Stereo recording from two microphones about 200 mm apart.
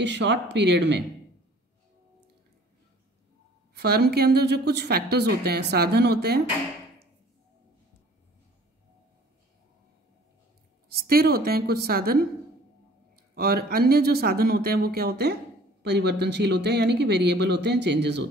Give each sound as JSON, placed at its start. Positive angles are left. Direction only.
{"t": 0.0, "sound": "speech", "side_deg": -60}
{"t": 3.7, "sound": "a woman's voice", "side_deg": -55}
{"t": 11.1, "sound": "a woman's voice", "side_deg": -50}
{"t": 13.3, "sound": "a woman's voice", "side_deg": -50}